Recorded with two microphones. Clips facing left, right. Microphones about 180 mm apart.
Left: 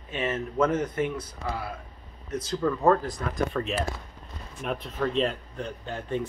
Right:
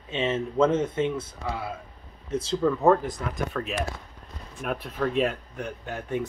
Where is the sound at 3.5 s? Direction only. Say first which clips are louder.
Left 1 dB; 5° left (ahead or behind).